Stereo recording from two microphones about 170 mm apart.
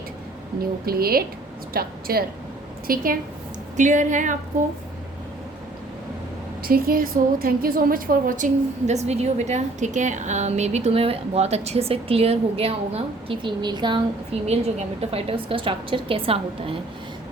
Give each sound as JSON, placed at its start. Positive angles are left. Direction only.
{"t": 0.9, "sound": "a woman's voice", "side_deg": -60}
{"t": 3.8, "sound": "a woman's voice", "side_deg": -50}
{"t": 6.6, "sound": "a woman's voice", "side_deg": -60}
{"t": 8.9, "sound": "a woman's voice", "side_deg": -40}
{"t": 14.4, "sound": "a woman's voice", "side_deg": -40}